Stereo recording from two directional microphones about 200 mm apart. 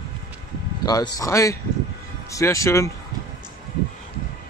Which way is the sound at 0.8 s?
20° left (ahead or behind).